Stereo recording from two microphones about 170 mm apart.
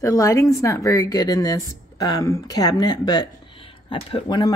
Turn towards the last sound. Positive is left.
turn(degrees=30)  # may be behind; listen again after turning